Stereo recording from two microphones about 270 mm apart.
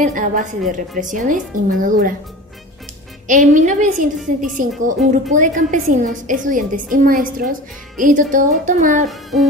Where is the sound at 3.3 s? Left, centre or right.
Right.